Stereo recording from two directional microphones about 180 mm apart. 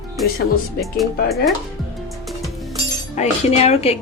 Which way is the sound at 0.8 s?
Centre (ahead or behind).